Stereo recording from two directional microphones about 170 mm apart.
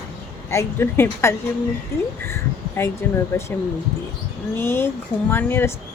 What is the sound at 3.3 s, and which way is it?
Speech, 15° left (ahead or behind).